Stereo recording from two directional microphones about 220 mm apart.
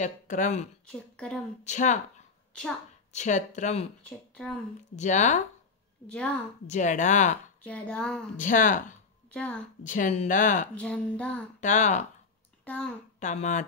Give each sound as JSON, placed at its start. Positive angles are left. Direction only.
{"t": 0.0, "sound": "speech", "side_deg": 35}
{"t": 0.8, "sound": "speech", "side_deg": 5}
{"t": 1.6, "sound": "speech", "side_deg": 35}
{"t": 4.9, "sound": "speech", "side_deg": 35}
{"t": 6.0, "sound": "speech", "side_deg": 5}
{"t": 6.7, "sound": "speech", "side_deg": 35}
{"t": 7.6, "sound": "speech", "side_deg": 5}
{"t": 8.4, "sound": "speech", "side_deg": 35}
{"t": 9.3, "sound": "a woman's voice", "side_deg": 5}
{"t": 9.8, "sound": "speech", "side_deg": 35}
{"t": 10.7, "sound": "speech", "side_deg": 5}
{"t": 11.6, "sound": "speech", "side_deg": 35}
{"t": 12.6, "sound": "speech", "side_deg": 5}
{"t": 13.2, "sound": "speech", "side_deg": 35}